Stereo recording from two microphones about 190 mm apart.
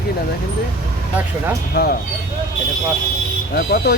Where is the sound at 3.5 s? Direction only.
60° left (ahead or behind).